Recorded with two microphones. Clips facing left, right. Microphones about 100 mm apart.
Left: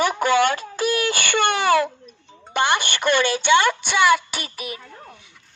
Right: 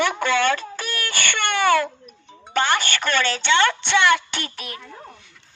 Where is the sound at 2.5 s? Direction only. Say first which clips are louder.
Even; 15° left (ahead or behind).